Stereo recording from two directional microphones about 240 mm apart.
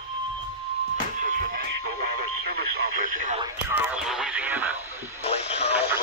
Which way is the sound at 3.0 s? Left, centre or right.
Right.